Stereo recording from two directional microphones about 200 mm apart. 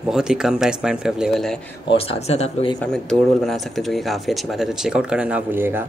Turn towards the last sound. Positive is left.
turn(degrees=-10)  # may be behind; listen again after turning